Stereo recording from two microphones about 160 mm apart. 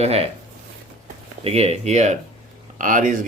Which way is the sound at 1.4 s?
40° right (ahead or behind).